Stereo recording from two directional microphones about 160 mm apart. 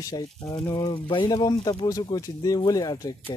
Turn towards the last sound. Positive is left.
turn(degrees=25)  # may be behind; listen again after turning